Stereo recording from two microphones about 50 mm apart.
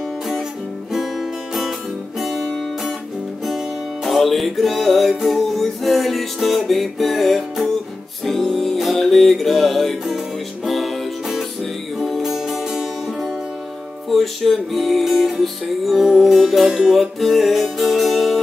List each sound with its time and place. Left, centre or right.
0.9 s music: centre
3.4 s music: centre